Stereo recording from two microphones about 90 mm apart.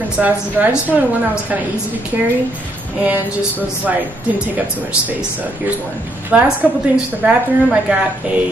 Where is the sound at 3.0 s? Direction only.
20° right (ahead or behind).